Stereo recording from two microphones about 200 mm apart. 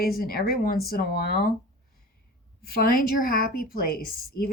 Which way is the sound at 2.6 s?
50° left (ahead or behind).